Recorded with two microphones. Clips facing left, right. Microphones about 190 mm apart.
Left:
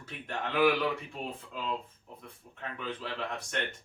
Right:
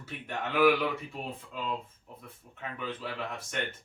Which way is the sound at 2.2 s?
5° right (ahead or behind).